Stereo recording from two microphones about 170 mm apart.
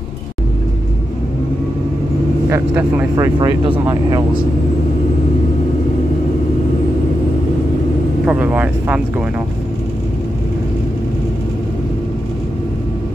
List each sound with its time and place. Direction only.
2.5 s speech: 15° right (ahead or behind)
3.3 s speech: 25° right (ahead or behind)
8.3 s speech: 10° right (ahead or behind)